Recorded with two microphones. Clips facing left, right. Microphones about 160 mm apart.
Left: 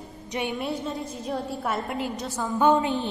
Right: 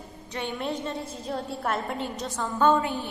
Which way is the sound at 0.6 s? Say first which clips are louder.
Left 1 dB; 5° left (ahead or behind).